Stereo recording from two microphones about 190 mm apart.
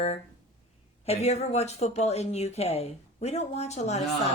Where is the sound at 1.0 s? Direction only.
35° left (ahead or behind).